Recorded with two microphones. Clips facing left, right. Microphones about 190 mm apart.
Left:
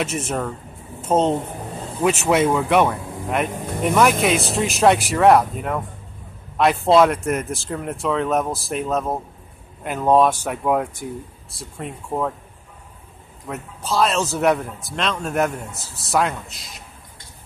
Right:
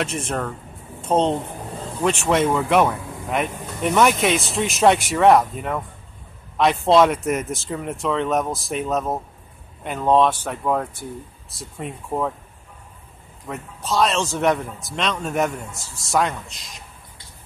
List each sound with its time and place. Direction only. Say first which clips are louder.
0.0 s speech: left 1 dB; 5° left (ahead or behind)
13.5 s speech: even; centre (ahead or behind)
15.7 s a man's voice: left 1 dB; 35° left (ahead or behind)
16.1 s speech: left 1 dB; centre (ahead or behind)